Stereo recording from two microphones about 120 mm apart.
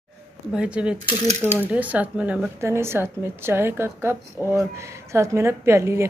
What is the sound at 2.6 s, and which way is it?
A woman's voice, 20° right (ahead or behind).